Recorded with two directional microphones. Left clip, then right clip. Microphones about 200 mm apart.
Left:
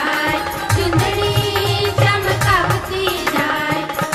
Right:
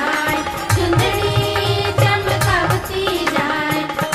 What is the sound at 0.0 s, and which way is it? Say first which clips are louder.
Music: even; centre (ahead or behind).